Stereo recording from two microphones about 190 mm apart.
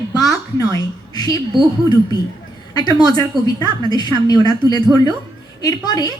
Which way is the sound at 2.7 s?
20° left (ahead or behind).